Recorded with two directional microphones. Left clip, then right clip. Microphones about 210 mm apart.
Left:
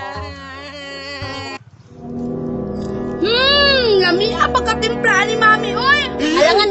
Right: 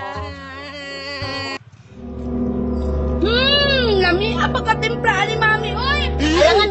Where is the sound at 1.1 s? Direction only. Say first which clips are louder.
Right 3 dB; 30° right (ahead or behind).